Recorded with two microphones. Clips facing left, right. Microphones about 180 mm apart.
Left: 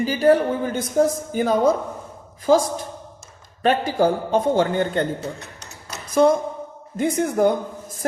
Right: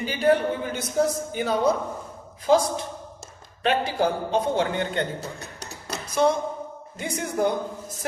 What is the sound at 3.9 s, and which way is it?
A woman's voice, 50° left (ahead or behind).